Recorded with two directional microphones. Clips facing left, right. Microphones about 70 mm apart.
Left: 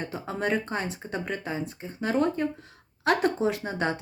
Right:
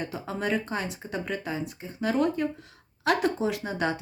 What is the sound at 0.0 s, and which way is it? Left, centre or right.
Speech, left.